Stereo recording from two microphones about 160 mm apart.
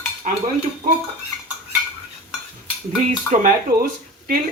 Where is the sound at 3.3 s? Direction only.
55° right (ahead or behind).